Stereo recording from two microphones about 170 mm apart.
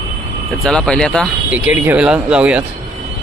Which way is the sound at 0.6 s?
5° left (ahead or behind).